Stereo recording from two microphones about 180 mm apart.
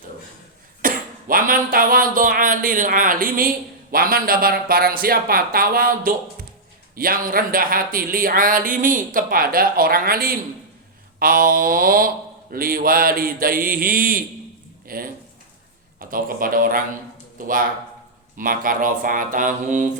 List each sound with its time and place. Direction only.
0.8 s speech: 50° right (ahead or behind)
18.3 s speech: 50° right (ahead or behind)